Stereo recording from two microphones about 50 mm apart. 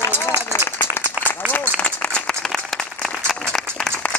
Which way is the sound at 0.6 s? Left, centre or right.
Left.